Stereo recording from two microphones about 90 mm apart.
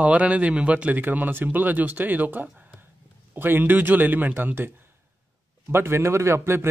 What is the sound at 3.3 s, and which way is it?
Speech, 25° right (ahead or behind).